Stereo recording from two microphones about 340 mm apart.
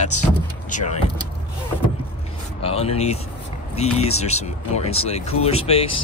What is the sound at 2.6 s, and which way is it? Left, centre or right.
Speech, centre.